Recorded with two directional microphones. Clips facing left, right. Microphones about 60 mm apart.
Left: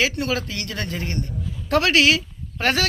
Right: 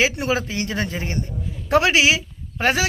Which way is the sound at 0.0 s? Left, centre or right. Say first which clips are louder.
Right 2 dB; centre.